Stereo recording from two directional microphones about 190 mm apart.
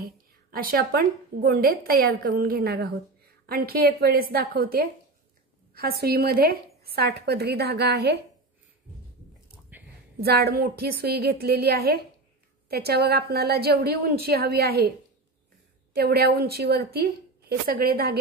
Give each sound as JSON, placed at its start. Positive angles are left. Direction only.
{"t": 0.0, "sound": "a woman's voice", "side_deg": -50}
{"t": 9.7, "sound": "a sound", "side_deg": -10}
{"t": 10.2, "sound": "a woman's voice", "side_deg": -55}
{"t": 15.9, "sound": "a woman's voice", "side_deg": -55}